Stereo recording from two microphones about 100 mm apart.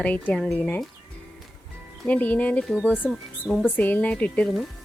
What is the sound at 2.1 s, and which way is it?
Speech, 15° left (ahead or behind).